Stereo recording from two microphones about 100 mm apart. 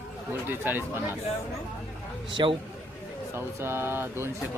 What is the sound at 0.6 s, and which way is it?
Speech, 20° right (ahead or behind).